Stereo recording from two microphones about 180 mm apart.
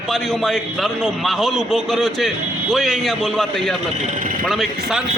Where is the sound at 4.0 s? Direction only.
40° right (ahead or behind).